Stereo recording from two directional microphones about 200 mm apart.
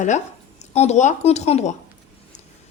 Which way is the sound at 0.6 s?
35° left (ahead or behind).